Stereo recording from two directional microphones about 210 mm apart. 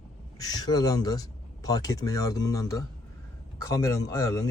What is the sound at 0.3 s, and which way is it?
Speech, 15° left (ahead or behind).